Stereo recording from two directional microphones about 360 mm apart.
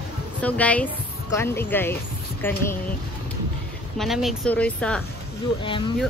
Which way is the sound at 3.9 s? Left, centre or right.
Centre.